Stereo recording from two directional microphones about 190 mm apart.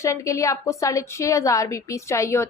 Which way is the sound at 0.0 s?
15° left (ahead or behind).